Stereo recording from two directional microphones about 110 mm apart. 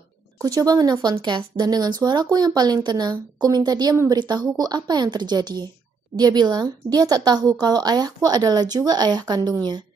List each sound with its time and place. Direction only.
0.4 s speech: 35° right (ahead or behind)